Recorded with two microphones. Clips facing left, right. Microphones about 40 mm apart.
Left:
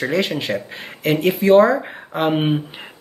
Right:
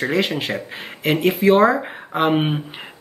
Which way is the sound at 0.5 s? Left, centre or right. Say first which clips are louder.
Left 2 dB; centre.